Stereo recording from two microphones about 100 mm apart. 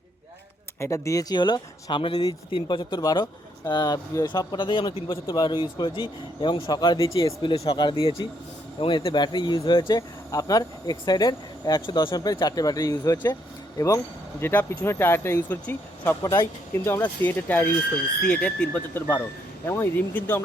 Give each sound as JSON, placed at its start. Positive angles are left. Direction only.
{"t": 0.8, "sound": "speech", "side_deg": 30}
{"t": 3.0, "sound": "speech", "side_deg": 40}
{"t": 4.3, "sound": "speech", "side_deg": 50}
{"t": 5.3, "sound": "speech", "side_deg": 50}
{"t": 7.1, "sound": "speech", "side_deg": 35}
{"t": 7.5, "sound": "speech", "side_deg": 80}
{"t": 7.8, "sound": "speech", "side_deg": 55}
{"t": 10.3, "sound": "speech", "side_deg": 35}
{"t": 16.2, "sound": "speech", "side_deg": 30}
{"t": 17.0, "sound": "speech", "side_deg": 20}